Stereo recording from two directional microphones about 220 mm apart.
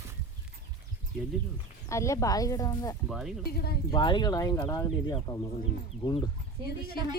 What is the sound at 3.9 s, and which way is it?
Speech, 20° left (ahead or behind).